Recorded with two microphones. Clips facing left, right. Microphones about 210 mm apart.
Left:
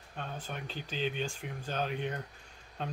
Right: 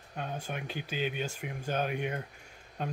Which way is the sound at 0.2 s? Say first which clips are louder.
Right 3 dB; 10° right (ahead or behind).